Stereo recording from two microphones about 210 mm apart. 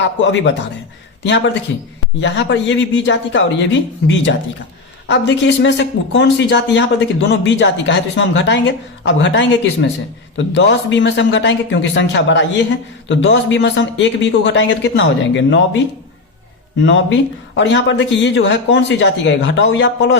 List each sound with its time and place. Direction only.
0.0 s speech: 60° left (ahead or behind)
2.2 s speech: 60° left (ahead or behind)
16.8 s speech: 60° left (ahead or behind)